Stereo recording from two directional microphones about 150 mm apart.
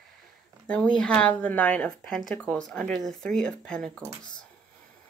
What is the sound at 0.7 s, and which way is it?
Speech, 5° left (ahead or behind).